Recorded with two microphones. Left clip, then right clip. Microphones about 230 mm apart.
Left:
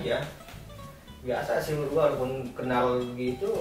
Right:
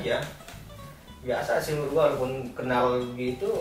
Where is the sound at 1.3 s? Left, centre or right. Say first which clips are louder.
Right 2 dB; centre.